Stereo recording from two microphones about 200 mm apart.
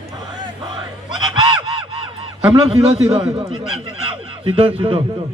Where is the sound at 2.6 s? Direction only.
30° right (ahead or behind).